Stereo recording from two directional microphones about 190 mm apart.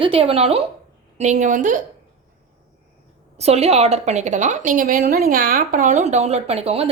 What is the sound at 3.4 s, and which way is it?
A woman's voice, 35° right (ahead or behind).